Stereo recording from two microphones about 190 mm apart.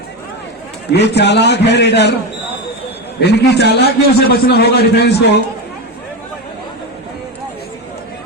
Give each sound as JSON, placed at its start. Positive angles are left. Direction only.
{"t": 0.9, "sound": "a man's voice", "side_deg": 60}
{"t": 3.2, "sound": "a man's voice", "side_deg": 60}